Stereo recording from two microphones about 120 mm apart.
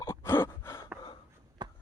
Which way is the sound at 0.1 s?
20° left (ahead or behind).